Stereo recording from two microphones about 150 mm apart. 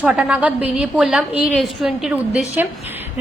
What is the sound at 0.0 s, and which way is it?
A woman's voice, 10° right (ahead or behind).